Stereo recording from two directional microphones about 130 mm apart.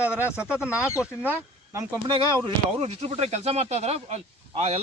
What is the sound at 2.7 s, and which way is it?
Speech, 55° right (ahead or behind).